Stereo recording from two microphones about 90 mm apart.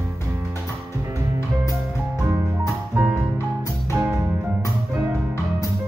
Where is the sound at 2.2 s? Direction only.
30° right (ahead or behind).